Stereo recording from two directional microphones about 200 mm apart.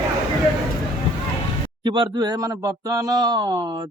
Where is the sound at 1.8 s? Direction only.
25° right (ahead or behind).